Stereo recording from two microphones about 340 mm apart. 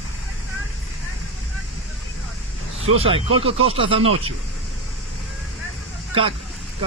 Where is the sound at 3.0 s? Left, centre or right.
Centre.